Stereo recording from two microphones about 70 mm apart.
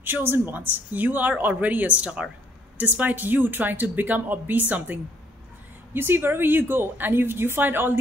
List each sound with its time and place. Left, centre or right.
0.0 s speech: right
5.9 s a woman's voice: right